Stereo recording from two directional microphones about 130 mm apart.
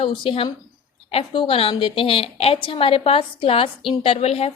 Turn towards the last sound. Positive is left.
turn(degrees=50)  # may be behind; listen again after turning